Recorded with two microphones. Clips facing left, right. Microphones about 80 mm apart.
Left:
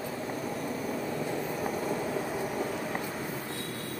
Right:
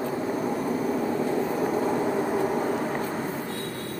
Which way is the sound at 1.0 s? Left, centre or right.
Right.